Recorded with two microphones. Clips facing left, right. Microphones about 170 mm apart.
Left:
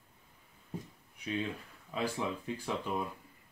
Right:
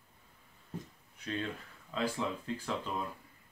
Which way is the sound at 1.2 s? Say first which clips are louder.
Left 2 dB; 10° left (ahead or behind).